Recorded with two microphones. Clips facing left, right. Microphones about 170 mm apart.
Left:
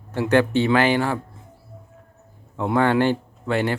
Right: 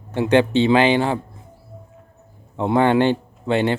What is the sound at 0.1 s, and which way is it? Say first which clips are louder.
Speech: right 2 dB; 20° right (ahead or behind).